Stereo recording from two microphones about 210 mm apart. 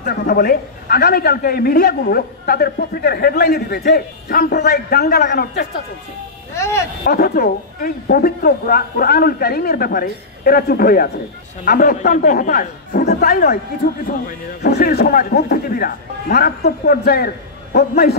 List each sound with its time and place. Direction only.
0.0 s a man's voice: 50° left (ahead or behind)
6.5 s speech: 15° left (ahead or behind)
7.1 s a man's voice: 45° left (ahead or behind)